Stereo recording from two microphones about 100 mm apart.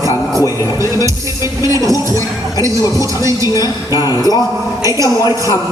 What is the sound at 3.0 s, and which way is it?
Speech, 35° right (ahead or behind).